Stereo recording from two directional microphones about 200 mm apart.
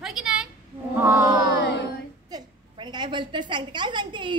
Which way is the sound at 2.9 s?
25° right (ahead or behind).